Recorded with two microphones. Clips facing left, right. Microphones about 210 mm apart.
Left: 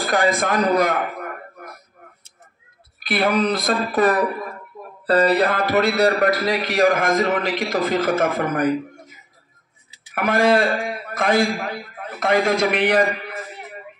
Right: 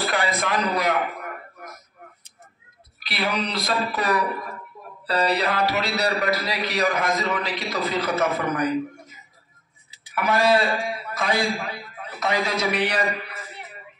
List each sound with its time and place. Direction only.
0.0 s a man's voice: 45° left (ahead or behind)
3.0 s a man's voice: 50° left (ahead or behind)
10.1 s a man's voice: 50° left (ahead or behind)